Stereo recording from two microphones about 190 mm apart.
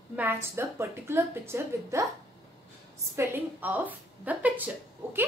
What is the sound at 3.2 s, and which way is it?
A woman's voice, 10° right (ahead or behind).